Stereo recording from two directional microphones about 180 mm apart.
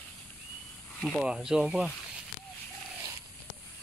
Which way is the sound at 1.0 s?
Centre (ahead or behind).